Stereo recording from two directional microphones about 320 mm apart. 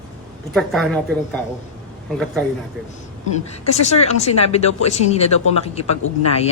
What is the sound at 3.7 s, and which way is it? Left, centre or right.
Speech, centre.